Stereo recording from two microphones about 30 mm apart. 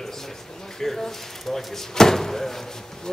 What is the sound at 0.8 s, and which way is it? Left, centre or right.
Speech, centre.